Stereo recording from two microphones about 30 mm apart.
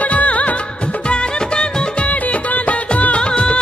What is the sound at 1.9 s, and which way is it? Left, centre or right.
Music, left.